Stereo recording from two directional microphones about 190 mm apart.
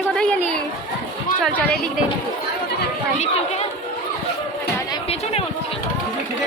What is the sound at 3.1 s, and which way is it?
Speech, 35° left (ahead or behind).